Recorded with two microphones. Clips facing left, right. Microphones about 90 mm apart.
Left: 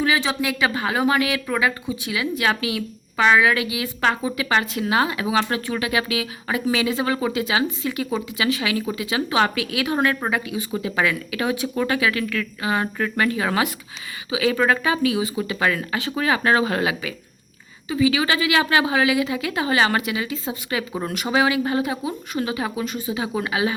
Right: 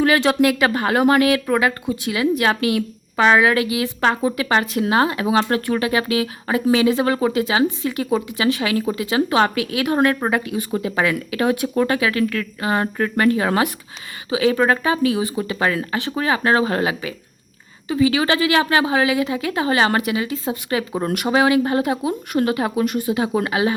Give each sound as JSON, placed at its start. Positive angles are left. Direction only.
{"t": 0.0, "sound": "speech", "side_deg": -60}
{"t": 3.2, "sound": "a woman's voice", "side_deg": -35}
{"t": 4.6, "sound": "a woman's voice", "side_deg": -55}
{"t": 4.9, "sound": "a woman's voice", "side_deg": -40}
{"t": 11.8, "sound": "a woman's voice", "side_deg": -35}
{"t": 15.0, "sound": "a woman's voice", "side_deg": -40}
{"t": 15.5, "sound": "a woman's voice", "side_deg": -30}
{"t": 17.8, "sound": "a woman's voice", "side_deg": -45}
{"t": 21.0, "sound": "speech", "side_deg": -50}
{"t": 23.2, "sound": "a woman's voice", "side_deg": -45}